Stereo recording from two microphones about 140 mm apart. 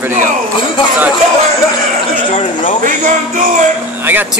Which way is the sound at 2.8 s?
70° right (ahead or behind).